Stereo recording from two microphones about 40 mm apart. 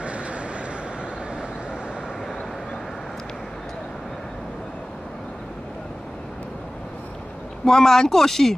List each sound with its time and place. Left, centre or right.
0.0 s vehicle: right
7.6 s speech: centre